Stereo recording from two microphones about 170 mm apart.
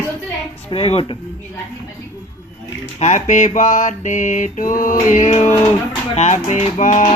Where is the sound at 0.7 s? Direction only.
35° left (ahead or behind).